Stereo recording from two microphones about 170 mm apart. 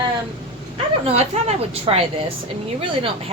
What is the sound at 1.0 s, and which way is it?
Speech, 35° right (ahead or behind).